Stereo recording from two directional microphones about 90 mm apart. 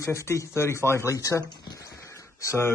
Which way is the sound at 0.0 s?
30° left (ahead or behind).